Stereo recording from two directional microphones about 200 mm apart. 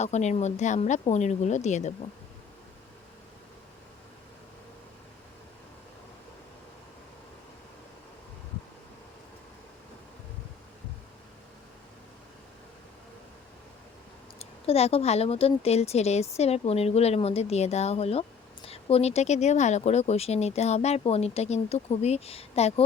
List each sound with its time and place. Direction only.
0.0 s speech: 35° left (ahead or behind)
14.3 s speech: 30° left (ahead or behind)